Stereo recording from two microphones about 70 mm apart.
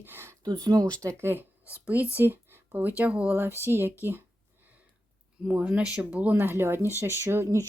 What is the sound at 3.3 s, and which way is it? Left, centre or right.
Speech, right.